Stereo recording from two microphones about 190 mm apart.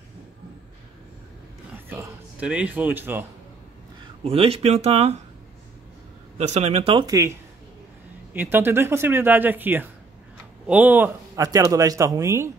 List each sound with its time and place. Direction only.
1.9 s a man's voice: 10° right (ahead or behind)
4.2 s speech: 30° right (ahead or behind)
6.3 s speech: 35° right (ahead or behind); by 12.4 s 15° right (ahead or behind)